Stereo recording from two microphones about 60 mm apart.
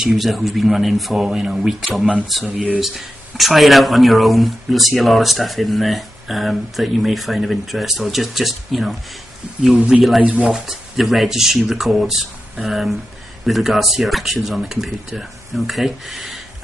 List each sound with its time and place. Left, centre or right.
0.0 s speech: centre
10.2 s speech: centre
10.5 s speech: centre